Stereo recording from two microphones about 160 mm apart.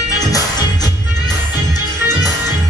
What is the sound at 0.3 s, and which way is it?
Music, 25° left (ahead or behind).